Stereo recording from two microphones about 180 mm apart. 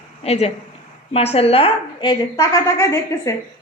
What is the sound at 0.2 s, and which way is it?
A woman's voice, 35° left (ahead or behind).